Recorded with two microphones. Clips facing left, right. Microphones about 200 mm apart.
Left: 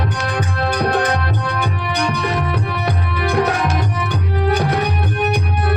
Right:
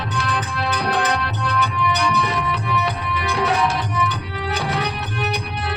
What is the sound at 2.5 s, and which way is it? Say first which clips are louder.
Music: left 2 dB; 50° left (ahead or behind).